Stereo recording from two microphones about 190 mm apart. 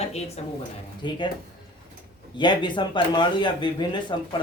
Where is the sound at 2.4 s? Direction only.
25° left (ahead or behind).